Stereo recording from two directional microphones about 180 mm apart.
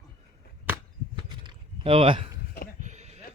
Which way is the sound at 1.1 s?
30° right (ahead or behind).